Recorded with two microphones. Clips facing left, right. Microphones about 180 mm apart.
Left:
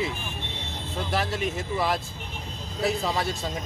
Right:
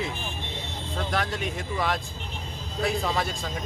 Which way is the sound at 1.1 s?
5° left (ahead or behind).